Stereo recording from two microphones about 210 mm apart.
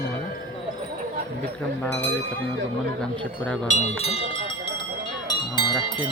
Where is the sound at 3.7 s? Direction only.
35° left (ahead or behind).